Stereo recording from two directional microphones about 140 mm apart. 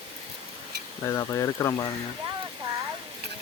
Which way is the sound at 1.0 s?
20° left (ahead or behind).